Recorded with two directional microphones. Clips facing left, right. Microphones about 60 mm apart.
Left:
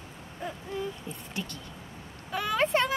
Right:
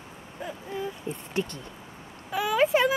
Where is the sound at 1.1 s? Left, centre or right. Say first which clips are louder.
Right 7 dB; right.